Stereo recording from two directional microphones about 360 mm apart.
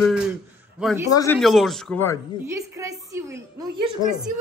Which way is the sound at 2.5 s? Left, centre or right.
Centre.